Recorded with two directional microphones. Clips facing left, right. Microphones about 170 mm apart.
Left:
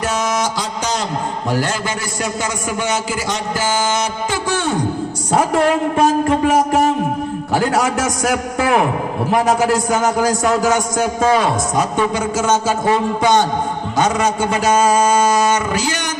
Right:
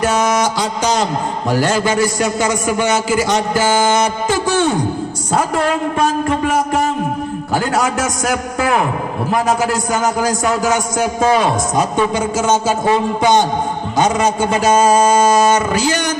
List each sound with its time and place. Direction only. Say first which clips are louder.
0.0 s a sound: right 4 dB; 65° right (ahead or behind)
1.5 s a man's voice: right 6 dB; 90° right; by 4.4 s 55° right (ahead or behind)
7.5 s a man's voice: even; 5° left (ahead or behind)
11.3 s a man's voice: right 1 dB; 20° right (ahead or behind)